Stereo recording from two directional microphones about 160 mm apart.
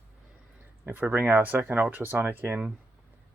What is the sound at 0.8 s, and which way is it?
Speech, 15° right (ahead or behind).